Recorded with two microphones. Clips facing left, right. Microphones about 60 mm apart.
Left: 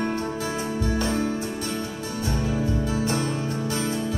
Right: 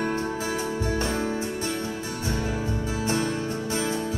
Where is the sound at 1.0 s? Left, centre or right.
Right.